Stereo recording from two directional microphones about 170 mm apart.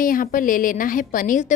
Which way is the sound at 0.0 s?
55° left (ahead or behind).